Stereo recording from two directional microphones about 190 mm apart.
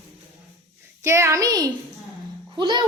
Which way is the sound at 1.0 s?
15° right (ahead or behind).